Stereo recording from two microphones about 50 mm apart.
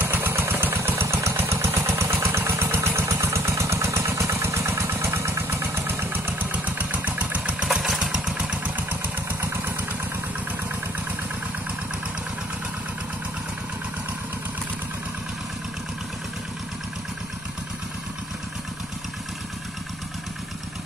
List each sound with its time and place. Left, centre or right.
0.0 s vehicle: right
1.0 s vehicle: right
2.9 s vehicle: right
6.5 s vehicle: right
7.6 s motorcycle: centre